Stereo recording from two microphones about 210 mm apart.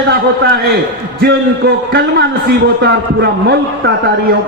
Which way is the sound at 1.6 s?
50° right (ahead or behind).